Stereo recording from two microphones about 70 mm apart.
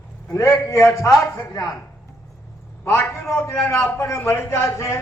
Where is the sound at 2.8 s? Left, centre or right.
Left.